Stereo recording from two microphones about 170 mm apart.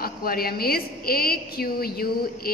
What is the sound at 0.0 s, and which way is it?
A woman's voice, 60° left (ahead or behind).